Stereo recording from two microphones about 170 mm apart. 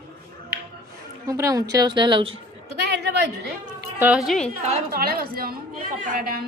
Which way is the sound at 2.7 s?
75° right (ahead or behind).